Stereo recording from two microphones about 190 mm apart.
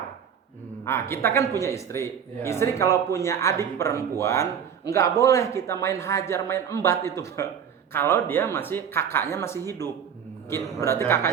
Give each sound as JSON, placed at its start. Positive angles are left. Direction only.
{"t": 0.9, "sound": "a man's voice", "side_deg": 15}